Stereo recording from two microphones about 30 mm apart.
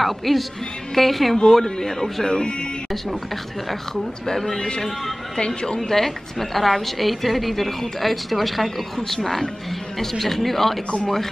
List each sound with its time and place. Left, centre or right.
0.0 s a woman's voice: centre
1.3 s speech: centre
2.2 s a woman's voice: left
4.6 s a woman's voice: left
5.8 s a woman's voice: centre